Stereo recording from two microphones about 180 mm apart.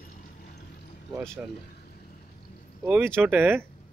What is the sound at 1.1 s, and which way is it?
Speech, 5° left (ahead or behind).